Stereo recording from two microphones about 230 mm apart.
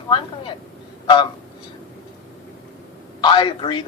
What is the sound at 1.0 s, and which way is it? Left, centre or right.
Speech, centre.